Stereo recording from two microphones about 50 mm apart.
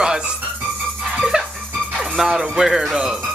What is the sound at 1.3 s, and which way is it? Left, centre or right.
Music, centre.